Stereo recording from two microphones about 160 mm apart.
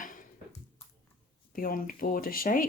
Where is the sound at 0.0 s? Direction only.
60° left (ahead or behind).